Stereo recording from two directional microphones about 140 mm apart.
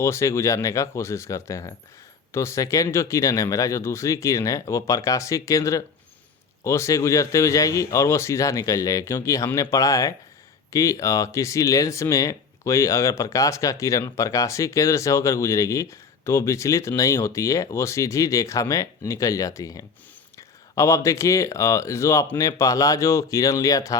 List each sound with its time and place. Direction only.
0.0 s speech: 20° left (ahead or behind)